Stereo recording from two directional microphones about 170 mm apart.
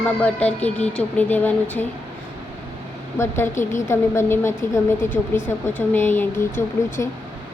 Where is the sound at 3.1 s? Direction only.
15° left (ahead or behind).